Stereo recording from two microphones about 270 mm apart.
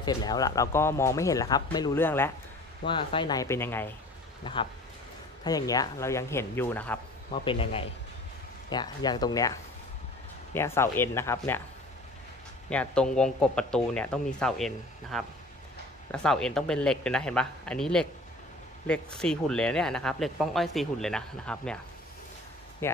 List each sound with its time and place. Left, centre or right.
0.0 s speech: centre
5.4 s speech: centre
7.2 s a man's voice: centre
12.6 s speech: centre